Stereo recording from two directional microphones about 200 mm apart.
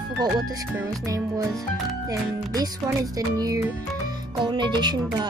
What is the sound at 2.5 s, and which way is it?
Speech, 20° right (ahead or behind).